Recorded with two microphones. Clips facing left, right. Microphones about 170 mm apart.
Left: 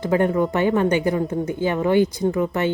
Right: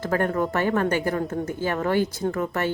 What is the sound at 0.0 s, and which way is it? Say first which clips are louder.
Speech: left 4 dB; 15° left (ahead or behind).